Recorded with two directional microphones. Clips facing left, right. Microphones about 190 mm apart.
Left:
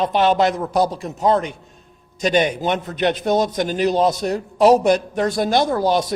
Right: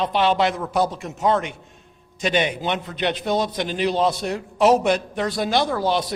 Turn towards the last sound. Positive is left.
turn(degrees=45)  # may be behind; listen again after turning